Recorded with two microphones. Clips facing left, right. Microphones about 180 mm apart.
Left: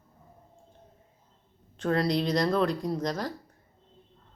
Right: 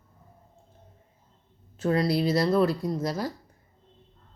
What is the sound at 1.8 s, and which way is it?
A woman's voice, 5° right (ahead or behind).